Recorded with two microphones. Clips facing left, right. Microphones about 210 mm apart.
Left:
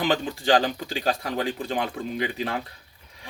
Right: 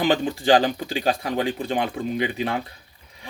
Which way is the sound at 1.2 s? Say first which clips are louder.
Right 3 dB; 20° right (ahead or behind).